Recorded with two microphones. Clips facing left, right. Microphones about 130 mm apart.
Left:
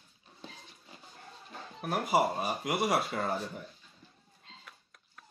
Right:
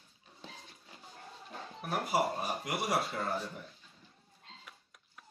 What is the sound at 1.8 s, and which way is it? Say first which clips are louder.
Speech: left 4 dB; 80° left.